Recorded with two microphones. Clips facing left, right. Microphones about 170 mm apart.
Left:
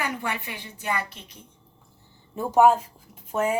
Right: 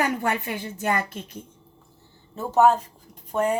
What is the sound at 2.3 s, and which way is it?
A woman's voice, 10° left (ahead or behind).